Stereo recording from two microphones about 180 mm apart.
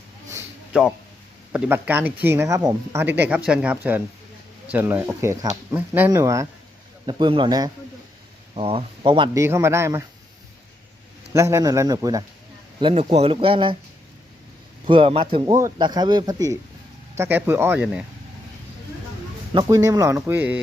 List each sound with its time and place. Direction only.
0.3 s a sound: 15° right (ahead or behind)
1.5 s speech: 10° right (ahead or behind)
11.3 s speech: 15° right (ahead or behind)
12.8 s speech: 35° right (ahead or behind)
14.8 s speech: 30° right (ahead or behind); by 17.8 s 10° right (ahead or behind)
19.5 s speech: 20° right (ahead or behind)